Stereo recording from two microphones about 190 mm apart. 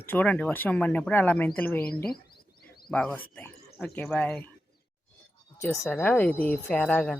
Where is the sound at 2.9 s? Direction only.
5° left (ahead or behind).